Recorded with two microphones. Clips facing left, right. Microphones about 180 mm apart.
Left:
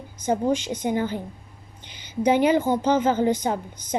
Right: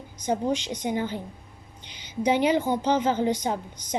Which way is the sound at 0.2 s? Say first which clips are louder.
Left 3 dB; 50° left (ahead or behind).